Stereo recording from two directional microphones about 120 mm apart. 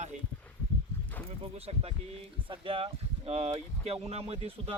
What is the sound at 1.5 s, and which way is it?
A man's voice, 55° right (ahead or behind).